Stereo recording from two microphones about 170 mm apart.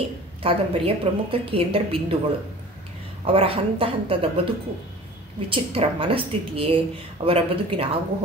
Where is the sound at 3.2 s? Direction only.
35° right (ahead or behind).